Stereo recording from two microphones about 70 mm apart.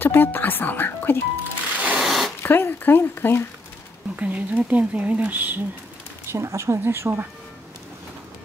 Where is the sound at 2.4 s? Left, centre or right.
Left.